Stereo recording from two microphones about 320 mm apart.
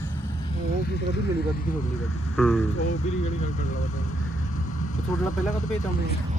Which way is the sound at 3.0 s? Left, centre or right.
Left.